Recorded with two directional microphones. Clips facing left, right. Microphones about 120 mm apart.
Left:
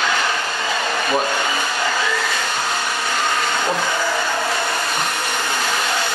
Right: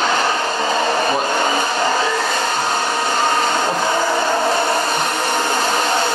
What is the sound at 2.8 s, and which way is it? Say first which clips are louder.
Vacuum cleaner: right 4 dB; 40° right (ahead or behind).